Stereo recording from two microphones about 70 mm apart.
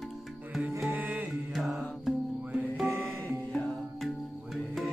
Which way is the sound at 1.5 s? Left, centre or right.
Centre.